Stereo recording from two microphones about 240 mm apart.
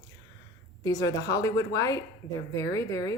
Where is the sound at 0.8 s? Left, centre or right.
Centre.